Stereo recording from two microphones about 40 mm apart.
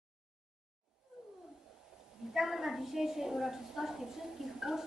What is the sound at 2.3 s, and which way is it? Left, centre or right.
A woman's voice, centre.